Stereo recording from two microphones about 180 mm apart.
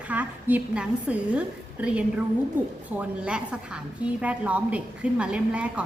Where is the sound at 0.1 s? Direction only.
10° right (ahead or behind).